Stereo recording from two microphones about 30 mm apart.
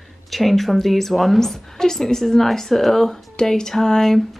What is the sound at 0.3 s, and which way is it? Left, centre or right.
A woman's voice, centre.